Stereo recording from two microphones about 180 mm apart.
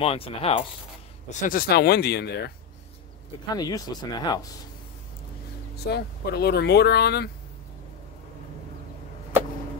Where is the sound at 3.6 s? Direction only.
20° left (ahead or behind).